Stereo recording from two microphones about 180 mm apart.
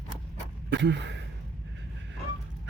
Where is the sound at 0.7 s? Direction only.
80° right.